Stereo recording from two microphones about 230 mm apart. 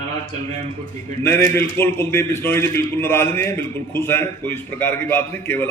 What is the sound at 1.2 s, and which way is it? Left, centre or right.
A man's voice, centre.